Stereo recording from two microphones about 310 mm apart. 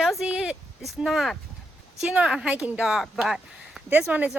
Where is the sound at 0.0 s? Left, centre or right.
Centre.